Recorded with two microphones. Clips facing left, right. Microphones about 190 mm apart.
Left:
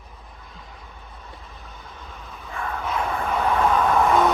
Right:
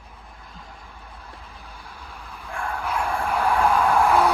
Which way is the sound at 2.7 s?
10° right (ahead or behind).